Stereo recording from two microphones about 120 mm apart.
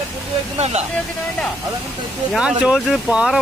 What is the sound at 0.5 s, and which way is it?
Speech, 65° right (ahead or behind).